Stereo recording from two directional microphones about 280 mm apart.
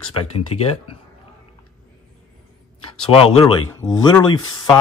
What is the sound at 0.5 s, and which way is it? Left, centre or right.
Speech, left.